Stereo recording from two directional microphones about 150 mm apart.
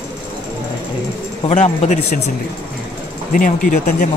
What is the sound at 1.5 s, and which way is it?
Speech, 50° left (ahead or behind).